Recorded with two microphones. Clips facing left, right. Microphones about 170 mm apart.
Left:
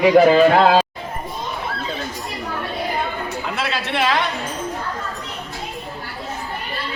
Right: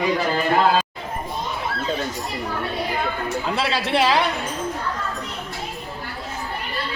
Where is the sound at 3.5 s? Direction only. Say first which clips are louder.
Right 2 dB; 30° right (ahead or behind).